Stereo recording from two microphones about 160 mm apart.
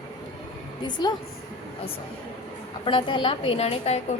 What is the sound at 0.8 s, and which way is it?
Speech, 25° left (ahead or behind).